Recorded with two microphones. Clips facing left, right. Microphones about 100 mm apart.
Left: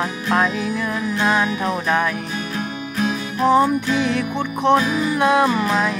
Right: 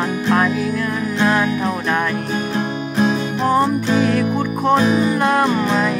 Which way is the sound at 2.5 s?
30° right (ahead or behind).